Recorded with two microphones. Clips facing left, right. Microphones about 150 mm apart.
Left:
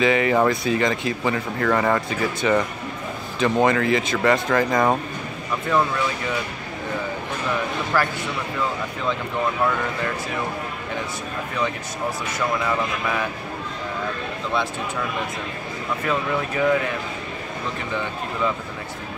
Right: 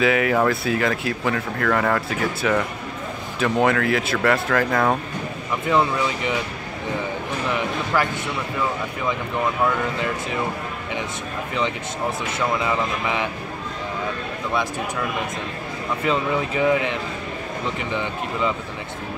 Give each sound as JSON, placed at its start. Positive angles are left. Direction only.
{"t": 0.0, "sound": "speech", "side_deg": -5}
{"t": 5.7, "sound": "speech", "side_deg": -15}
{"t": 12.6, "sound": "speech", "side_deg": -20}
{"t": 16.1, "sound": "speech", "side_deg": -20}